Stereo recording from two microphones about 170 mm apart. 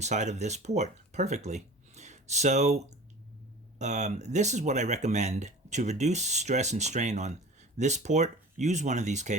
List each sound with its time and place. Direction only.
0.0 s speech: 45° right (ahead or behind)